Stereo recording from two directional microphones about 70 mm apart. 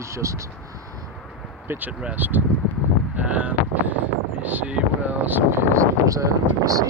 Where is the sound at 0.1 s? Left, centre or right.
Right.